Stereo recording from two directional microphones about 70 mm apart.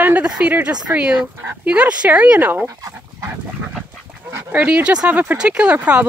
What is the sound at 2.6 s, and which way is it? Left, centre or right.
Dog, right.